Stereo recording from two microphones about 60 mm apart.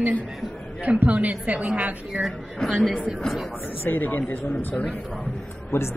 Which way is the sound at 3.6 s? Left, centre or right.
Left.